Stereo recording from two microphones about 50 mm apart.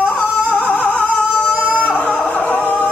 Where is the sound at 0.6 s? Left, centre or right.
Left.